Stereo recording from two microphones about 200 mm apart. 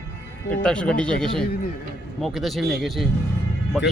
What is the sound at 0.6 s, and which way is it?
Speech, 5° left (ahead or behind).